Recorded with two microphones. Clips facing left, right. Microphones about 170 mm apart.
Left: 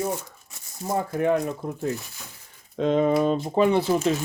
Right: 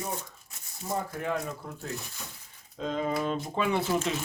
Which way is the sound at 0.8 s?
55° left (ahead or behind).